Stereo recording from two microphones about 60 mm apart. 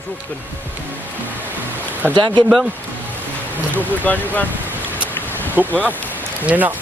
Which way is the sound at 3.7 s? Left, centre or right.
Left.